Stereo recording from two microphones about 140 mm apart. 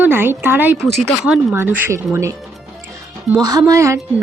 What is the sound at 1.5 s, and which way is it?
Speech, 15° right (ahead or behind).